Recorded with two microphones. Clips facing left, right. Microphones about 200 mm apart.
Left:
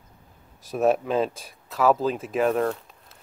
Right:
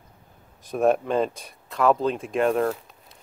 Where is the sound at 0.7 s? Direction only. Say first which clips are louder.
Right 1 dB; centre (ahead or behind).